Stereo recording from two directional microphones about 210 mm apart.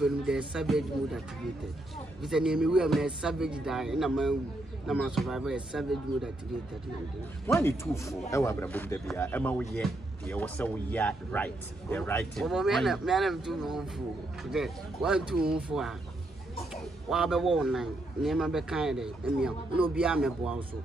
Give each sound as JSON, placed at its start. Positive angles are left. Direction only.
{"t": 0.0, "sound": "speech", "side_deg": -5}
{"t": 2.2, "sound": "speech", "side_deg": -5}
{"t": 7.4, "sound": "speech", "side_deg": 15}